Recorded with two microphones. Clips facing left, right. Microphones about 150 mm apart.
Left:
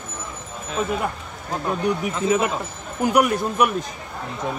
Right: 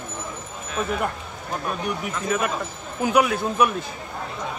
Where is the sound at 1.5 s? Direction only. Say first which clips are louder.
Left 5 dB; 25° left (ahead or behind).